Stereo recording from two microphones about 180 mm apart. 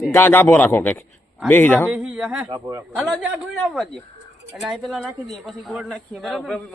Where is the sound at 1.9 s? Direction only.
5° right (ahead or behind).